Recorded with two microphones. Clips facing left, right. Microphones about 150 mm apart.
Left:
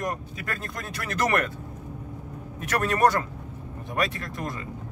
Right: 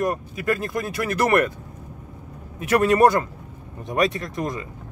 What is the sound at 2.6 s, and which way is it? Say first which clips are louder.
Speech: right 6 dB; 10° right (ahead or behind).